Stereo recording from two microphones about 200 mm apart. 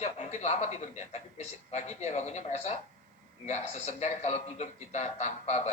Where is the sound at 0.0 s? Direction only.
35° left (ahead or behind).